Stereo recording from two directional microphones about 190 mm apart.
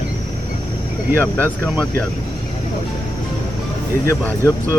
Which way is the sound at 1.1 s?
10° left (ahead or behind).